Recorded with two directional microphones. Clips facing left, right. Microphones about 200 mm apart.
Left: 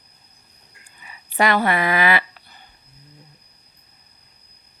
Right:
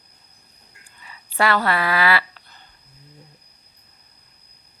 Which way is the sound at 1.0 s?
15° left (ahead or behind).